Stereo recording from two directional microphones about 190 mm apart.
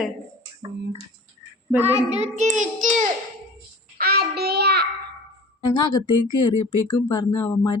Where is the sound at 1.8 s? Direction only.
35° right (ahead or behind).